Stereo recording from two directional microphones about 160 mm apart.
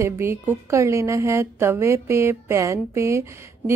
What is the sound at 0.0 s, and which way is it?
A woman's voice, 15° right (ahead or behind).